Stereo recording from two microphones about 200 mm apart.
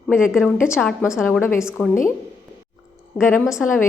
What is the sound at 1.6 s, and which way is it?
Speech, 5° right (ahead or behind).